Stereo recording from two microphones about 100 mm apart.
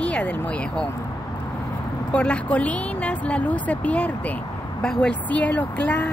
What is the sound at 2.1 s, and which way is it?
Speech, 10° left (ahead or behind).